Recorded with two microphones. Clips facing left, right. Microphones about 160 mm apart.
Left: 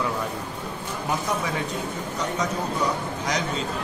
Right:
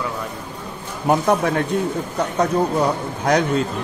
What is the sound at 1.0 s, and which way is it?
Speech, 60° right (ahead or behind).